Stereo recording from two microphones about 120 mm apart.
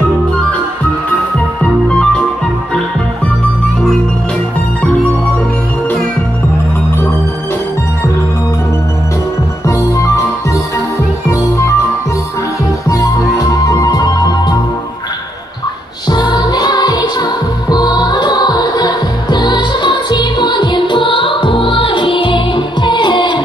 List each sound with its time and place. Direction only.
1.6 s music: 10° left (ahead or behind)
9.7 s music: 25° left (ahead or behind)
12.8 s music: 30° left (ahead or behind)
16.1 s music: 35° left (ahead or behind)